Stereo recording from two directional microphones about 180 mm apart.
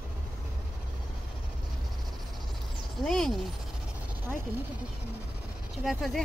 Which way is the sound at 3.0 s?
Centre (ahead or behind).